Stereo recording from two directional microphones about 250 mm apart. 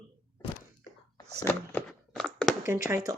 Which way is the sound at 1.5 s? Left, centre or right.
Centre.